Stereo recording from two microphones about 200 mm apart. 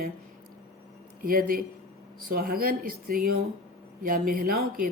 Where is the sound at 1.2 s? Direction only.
45° right (ahead or behind).